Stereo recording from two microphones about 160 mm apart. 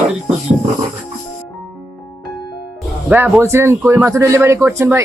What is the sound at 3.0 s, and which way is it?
A man's voice, 10° right (ahead or behind).